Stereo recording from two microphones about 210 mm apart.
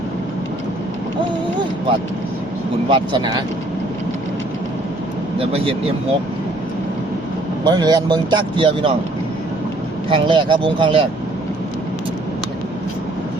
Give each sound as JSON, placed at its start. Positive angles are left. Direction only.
{"t": 2.9, "sound": "speech", "side_deg": -20}
{"t": 5.4, "sound": "speech", "side_deg": -25}
{"t": 7.6, "sound": "speech", "side_deg": -20}
{"t": 10.1, "sound": "speech", "side_deg": -25}